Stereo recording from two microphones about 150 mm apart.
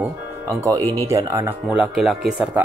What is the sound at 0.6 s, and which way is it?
Speech, 25° right (ahead or behind).